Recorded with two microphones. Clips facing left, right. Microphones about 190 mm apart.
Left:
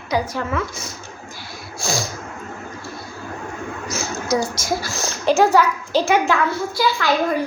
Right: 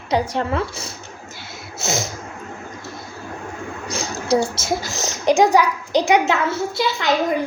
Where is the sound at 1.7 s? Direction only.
20° right (ahead or behind).